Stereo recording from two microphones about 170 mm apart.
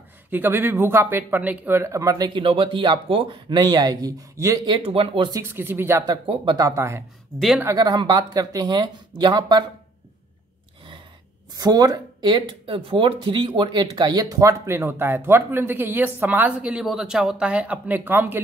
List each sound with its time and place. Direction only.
0.3 s speech: 10° right (ahead or behind); by 5.4 s 30° right (ahead or behind)
5.4 s speech: 10° right (ahead or behind)
7.3 s speech: centre (ahead or behind)
7.6 s speech: 25° right (ahead or behind)
11.5 s speech: 20° right (ahead or behind)